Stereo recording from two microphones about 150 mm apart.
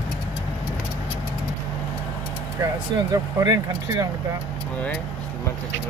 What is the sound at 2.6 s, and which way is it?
Speech, 25° right (ahead or behind).